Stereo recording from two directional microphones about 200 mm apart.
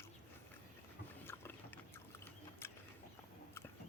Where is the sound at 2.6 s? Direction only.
10° left (ahead or behind).